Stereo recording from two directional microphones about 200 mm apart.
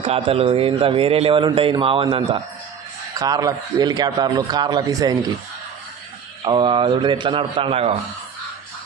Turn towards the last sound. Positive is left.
turn(degrees=-30)  # may be behind; listen again after turning